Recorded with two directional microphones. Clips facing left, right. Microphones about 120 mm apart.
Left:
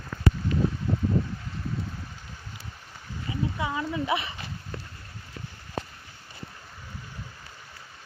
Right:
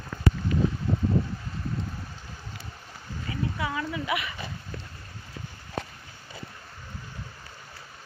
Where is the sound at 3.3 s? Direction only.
20° left (ahead or behind).